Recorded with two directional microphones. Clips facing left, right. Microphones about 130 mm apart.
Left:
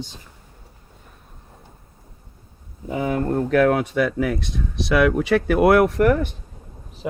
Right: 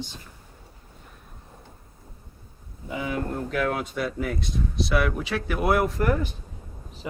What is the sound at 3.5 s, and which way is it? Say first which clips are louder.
Speech: left 11 dB; 65° left (ahead or behind).